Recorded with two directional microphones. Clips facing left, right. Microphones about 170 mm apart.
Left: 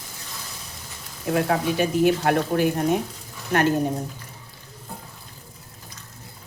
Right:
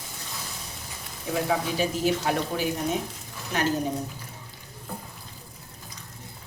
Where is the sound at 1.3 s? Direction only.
60° left (ahead or behind).